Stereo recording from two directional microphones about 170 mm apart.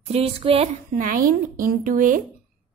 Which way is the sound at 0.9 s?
55° right (ahead or behind).